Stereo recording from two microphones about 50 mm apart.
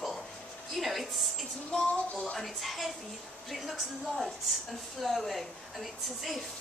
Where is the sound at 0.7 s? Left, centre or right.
Centre.